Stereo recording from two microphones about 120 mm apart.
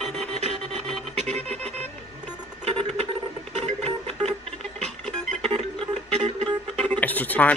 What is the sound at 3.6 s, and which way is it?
Music, 65° right (ahead or behind).